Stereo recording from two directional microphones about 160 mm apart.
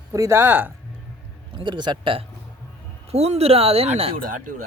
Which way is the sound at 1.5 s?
30° right (ahead or behind).